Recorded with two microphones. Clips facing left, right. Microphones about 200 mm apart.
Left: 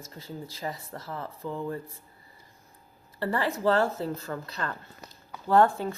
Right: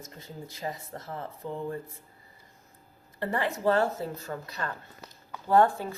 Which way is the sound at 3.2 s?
20° right (ahead or behind).